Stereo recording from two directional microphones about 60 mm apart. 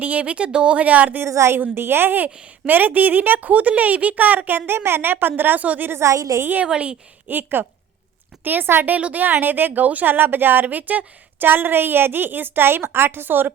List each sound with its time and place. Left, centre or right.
0.0 s a woman's voice: right
1.3 s a woman's voice: right
1.5 s a woman's voice: right
5.9 s a woman's voice: right
6.4 s a woman's voice: right
6.7 s a woman's voice: centre
7.3 s speech: right
9.0 s speech: right